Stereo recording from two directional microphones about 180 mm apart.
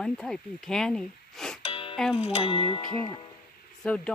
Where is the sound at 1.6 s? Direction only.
30° left (ahead or behind).